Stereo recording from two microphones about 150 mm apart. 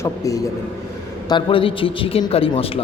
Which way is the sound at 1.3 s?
35° left (ahead or behind).